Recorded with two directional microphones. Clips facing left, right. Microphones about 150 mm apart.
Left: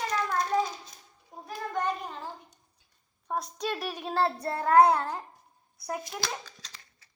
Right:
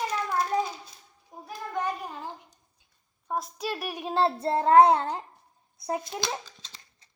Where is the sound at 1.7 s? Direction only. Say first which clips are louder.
Even; 10° right (ahead or behind).